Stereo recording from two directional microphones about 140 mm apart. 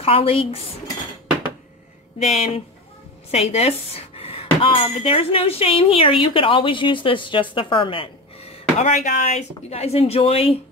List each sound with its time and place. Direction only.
0.0 s speech: 45° left (ahead or behind)
2.3 s speech: 50° left (ahead or behind)
8.9 s speech: 60° left (ahead or behind); by 10.6 s 45° left (ahead or behind)